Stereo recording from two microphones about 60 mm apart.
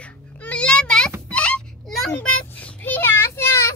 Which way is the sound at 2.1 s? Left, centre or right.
Left.